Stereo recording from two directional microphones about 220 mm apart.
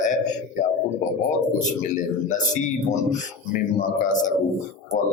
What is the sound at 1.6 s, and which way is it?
A man's voice, 35° left (ahead or behind).